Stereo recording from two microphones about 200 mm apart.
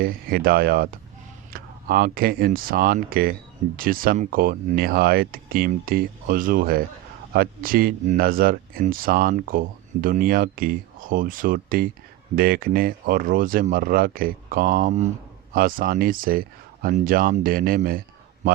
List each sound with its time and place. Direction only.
0.0 s speech: 45° right (ahead or behind)